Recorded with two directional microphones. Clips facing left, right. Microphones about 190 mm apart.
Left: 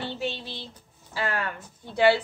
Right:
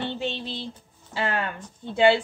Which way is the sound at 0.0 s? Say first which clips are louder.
Right 2 dB; 25° right (ahead or behind).